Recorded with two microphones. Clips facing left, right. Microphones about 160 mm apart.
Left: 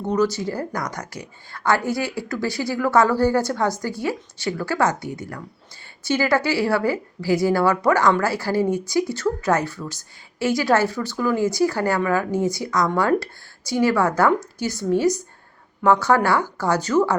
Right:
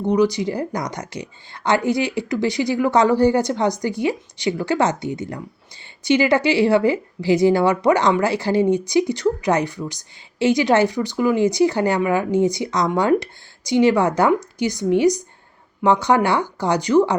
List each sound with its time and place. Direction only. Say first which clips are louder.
0.1 s a woman's voice: right 3 dB; 15° right (ahead or behind)